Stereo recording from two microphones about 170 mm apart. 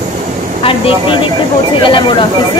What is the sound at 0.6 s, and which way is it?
Vehicle, 35° left (ahead or behind).